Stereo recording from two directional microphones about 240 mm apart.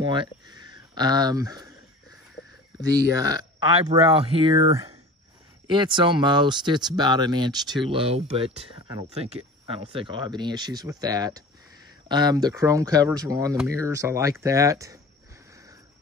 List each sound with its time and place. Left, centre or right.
0.0 s speech: centre
3.5 s speech: centre